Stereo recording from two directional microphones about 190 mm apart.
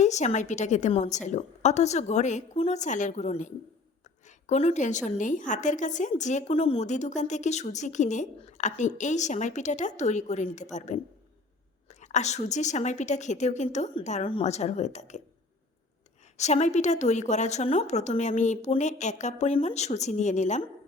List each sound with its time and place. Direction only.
0.0 s a woman's voice: 35° left (ahead or behind)
16.4 s a woman's voice: 35° left (ahead or behind)